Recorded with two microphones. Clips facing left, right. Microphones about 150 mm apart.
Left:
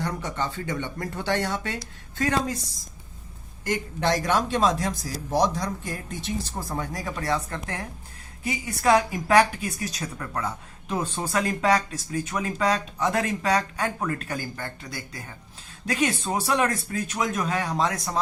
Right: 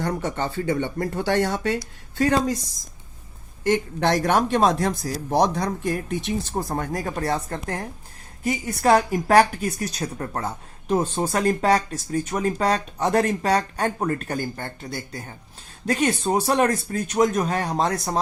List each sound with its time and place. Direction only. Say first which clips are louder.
0.0 s speech: right 4 dB; 45° right (ahead or behind)
2.1 s a woman's voice: right 5 dB; 30° right (ahead or behind)
3.7 s speech: right 4 dB; 55° right (ahead or behind); by 14.7 s 30° right (ahead or behind)
15.9 s speech: right 4 dB; 35° right (ahead or behind)